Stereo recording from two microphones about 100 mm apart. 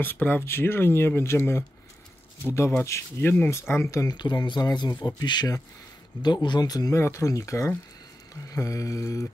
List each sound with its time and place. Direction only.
0.0 s speech: 20° left (ahead or behind)
4.0 s speech: 45° left (ahead or behind)
7.0 s mantra: 30° left (ahead or behind)